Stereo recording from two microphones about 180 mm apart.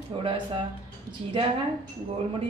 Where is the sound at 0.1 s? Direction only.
30° right (ahead or behind).